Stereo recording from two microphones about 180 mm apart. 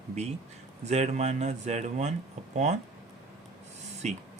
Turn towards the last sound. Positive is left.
turn(degrees=-40)  # may be behind; listen again after turning